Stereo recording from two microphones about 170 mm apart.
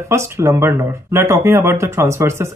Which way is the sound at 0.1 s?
15° right (ahead or behind).